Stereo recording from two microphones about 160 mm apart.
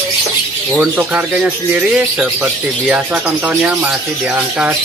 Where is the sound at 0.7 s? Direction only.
5° right (ahead or behind).